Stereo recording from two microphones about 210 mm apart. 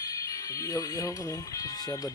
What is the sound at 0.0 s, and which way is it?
Speech, 15° left (ahead or behind).